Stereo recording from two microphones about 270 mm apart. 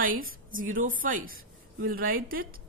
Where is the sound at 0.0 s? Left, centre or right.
Right.